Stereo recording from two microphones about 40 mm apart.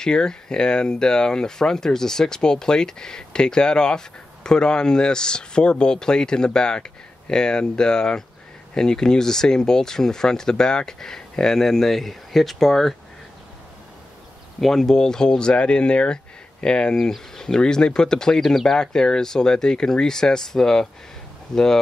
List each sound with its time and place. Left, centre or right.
0.0 s speech: centre
14.6 s speech: centre